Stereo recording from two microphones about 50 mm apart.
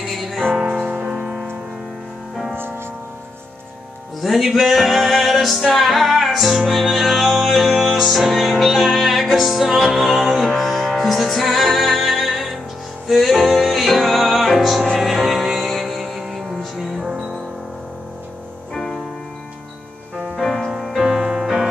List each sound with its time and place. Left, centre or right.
0.1 s music: centre
0.6 s music: centre
0.8 s music: right
1.1 s music: centre
4.2 s music: centre
20.3 s music: centre